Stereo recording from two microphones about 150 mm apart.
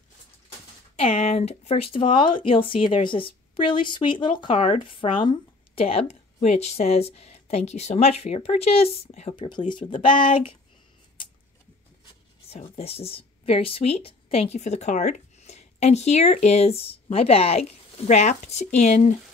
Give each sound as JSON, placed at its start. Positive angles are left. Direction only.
{"t": 0.9, "sound": "speech", "side_deg": 45}
{"t": 9.3, "sound": "speech", "side_deg": 30}
{"t": 12.4, "sound": "speech", "side_deg": 45}